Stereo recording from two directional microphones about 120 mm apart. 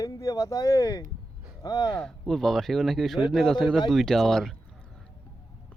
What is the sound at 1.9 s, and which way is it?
Speech, 5° left (ahead or behind).